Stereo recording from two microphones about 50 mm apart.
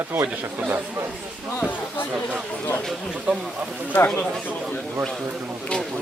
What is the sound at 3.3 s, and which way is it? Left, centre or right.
Speech, right.